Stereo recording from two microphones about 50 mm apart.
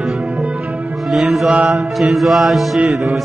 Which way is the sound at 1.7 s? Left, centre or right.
Centre.